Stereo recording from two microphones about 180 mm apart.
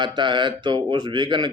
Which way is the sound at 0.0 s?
25° right (ahead or behind).